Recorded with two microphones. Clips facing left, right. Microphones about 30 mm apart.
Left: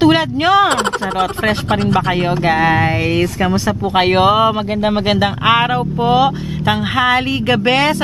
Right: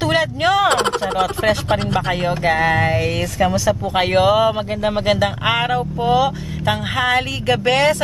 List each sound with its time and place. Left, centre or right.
0.0 s speech: left
1.7 s speech: centre
2.4 s speech: left